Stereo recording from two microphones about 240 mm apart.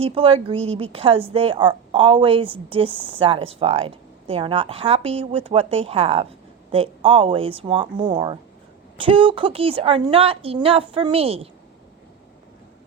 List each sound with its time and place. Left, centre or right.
0.0 s speech: right